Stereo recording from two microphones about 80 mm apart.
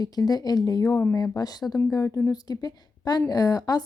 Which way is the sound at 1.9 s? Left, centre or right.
Left.